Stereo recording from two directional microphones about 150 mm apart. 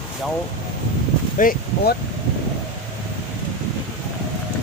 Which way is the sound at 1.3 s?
65° left (ahead or behind).